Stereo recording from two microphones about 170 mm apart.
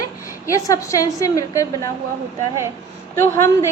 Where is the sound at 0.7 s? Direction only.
20° left (ahead or behind).